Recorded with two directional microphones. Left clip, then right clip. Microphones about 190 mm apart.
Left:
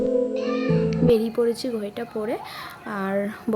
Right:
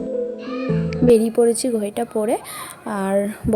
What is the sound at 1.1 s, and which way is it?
A woman's voice, 15° right (ahead or behind).